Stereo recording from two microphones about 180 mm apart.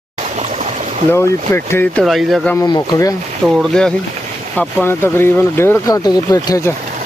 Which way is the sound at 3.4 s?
Centre (ahead or behind).